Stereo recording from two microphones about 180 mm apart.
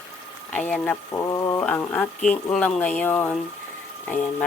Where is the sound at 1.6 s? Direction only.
10° left (ahead or behind).